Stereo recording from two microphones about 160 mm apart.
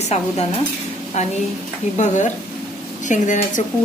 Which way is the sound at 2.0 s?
50° left (ahead or behind).